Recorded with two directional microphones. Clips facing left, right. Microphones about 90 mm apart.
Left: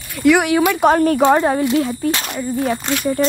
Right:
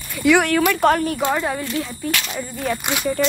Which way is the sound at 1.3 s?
30° left (ahead or behind).